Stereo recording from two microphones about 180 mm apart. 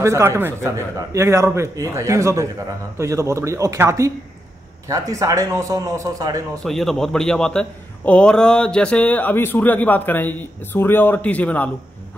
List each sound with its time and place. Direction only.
0.0 s a man's voice: 15° right (ahead or behind)
6.6 s a man's voice: centre (ahead or behind)